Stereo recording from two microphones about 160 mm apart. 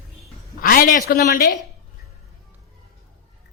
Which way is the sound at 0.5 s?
65° left (ahead or behind).